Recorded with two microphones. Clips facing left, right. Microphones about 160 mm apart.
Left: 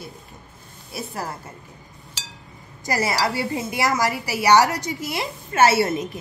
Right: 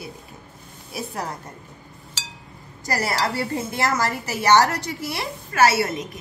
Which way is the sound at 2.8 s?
20° left (ahead or behind).